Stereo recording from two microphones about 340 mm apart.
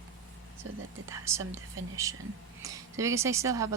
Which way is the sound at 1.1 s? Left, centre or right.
Centre.